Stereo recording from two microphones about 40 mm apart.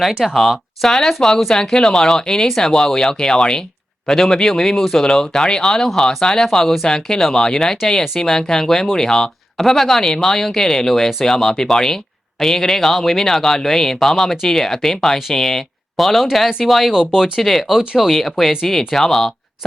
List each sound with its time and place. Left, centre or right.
0.3 s speech: centre
9.6 s speech: centre
16.9 s speech: centre
17.4 s speech: centre
17.7 s speech: centre
18.1 s speech: centre